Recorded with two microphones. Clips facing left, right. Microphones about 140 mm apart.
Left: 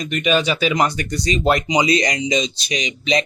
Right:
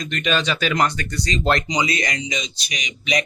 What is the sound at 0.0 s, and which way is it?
Speech, 10° left (ahead or behind).